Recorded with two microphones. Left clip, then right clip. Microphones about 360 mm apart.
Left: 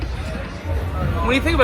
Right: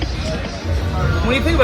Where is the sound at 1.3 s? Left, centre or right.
Left.